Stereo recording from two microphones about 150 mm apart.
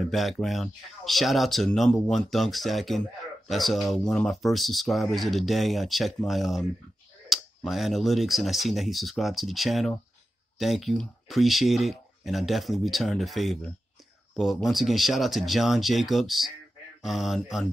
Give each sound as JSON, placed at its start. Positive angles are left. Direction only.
{"t": 0.0, "sound": "speech", "side_deg": 0}